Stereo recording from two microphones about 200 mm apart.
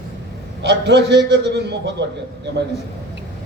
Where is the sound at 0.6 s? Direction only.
60° right (ahead or behind).